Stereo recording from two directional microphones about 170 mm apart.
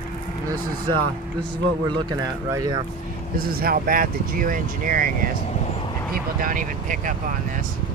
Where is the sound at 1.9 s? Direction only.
25° right (ahead or behind).